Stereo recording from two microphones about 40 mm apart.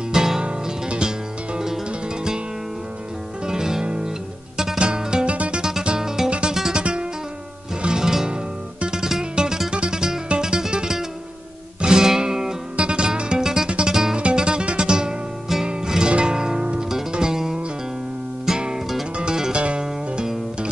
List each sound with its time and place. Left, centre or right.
0.1 s music: centre
0.5 s music: right
3.4 s music: centre
5.3 s music: right
5.6 s music: centre
6.8 s music: right
12.7 s music: right
14.1 s music: right